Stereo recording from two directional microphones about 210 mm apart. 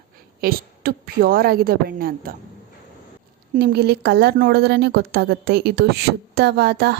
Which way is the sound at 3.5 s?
50° right (ahead or behind).